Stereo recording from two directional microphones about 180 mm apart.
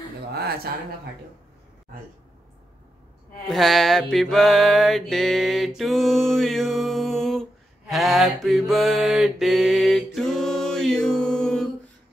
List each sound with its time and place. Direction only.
0.3 s speech: 60° right (ahead or behind)
3.4 s mantra: centre (ahead or behind)